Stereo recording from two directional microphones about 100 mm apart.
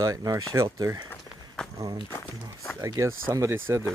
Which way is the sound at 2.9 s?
35° right (ahead or behind).